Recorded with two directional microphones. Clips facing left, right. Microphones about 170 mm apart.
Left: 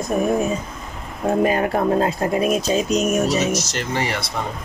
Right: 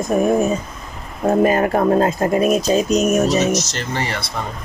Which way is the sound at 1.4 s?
50° right (ahead or behind).